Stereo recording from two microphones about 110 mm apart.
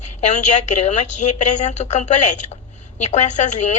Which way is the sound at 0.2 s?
90° left.